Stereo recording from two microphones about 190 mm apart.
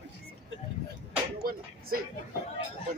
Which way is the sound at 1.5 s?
50° right (ahead or behind).